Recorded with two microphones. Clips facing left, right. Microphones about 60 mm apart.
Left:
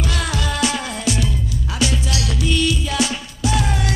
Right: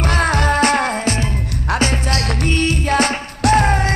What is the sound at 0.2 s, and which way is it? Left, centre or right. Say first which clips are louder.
Music: right 8 dB; right.